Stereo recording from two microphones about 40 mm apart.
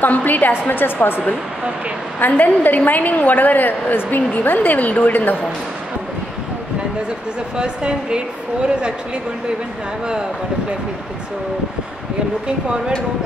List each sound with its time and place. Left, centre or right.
0.0 s a woman's voice: left
0.5 s a woman's voice: left
2.1 s a woman's voice: left
7.5 s speech: right
12.4 s speech: right